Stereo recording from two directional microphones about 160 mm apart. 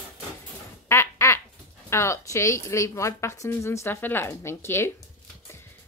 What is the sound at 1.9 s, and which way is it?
Speech, 15° left (ahead or behind).